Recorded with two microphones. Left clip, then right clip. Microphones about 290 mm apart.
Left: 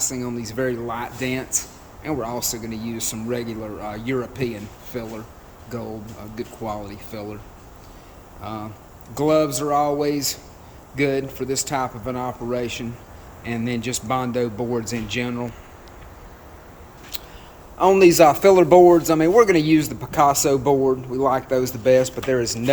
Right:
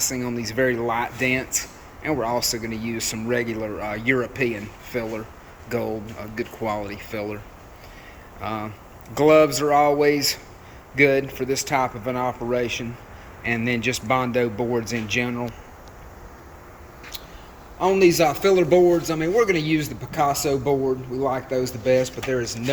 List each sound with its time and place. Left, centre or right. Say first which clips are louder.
0.0 s speech: right 1 dB; centre
8.4 s speech: right 3 dB; centre
17.7 s speech: left 4 dB; centre